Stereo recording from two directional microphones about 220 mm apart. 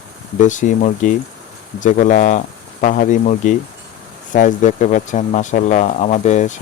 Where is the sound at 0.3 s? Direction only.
35° left (ahead or behind).